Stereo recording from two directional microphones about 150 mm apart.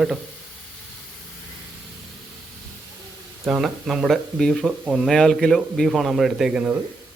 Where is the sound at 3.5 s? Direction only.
5° right (ahead or behind).